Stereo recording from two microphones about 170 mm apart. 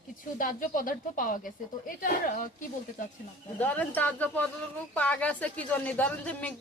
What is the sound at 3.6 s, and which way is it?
Speech, 10° left (ahead or behind).